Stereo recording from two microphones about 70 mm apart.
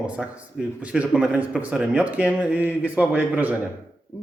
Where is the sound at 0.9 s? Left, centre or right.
Centre.